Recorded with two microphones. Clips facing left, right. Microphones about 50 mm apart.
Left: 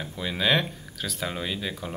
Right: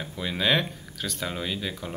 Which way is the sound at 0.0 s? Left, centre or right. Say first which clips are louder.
Even; centre.